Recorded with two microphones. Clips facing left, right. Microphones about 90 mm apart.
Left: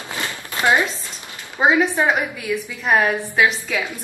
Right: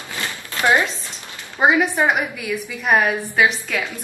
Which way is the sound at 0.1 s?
20° left (ahead or behind).